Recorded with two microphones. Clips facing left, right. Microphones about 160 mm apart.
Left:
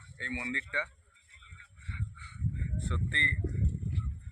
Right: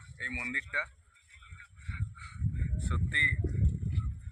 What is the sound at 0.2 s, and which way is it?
Speech, 5° right (ahead or behind).